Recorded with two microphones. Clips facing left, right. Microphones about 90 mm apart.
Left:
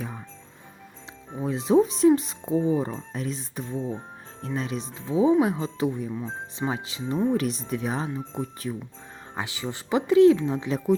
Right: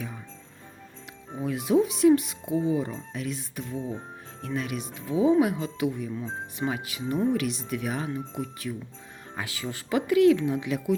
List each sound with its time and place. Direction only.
1.4 s speech: 30° left (ahead or behind)